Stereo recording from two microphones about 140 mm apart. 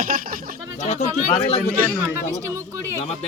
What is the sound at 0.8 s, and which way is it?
Speech, 55° left (ahead or behind).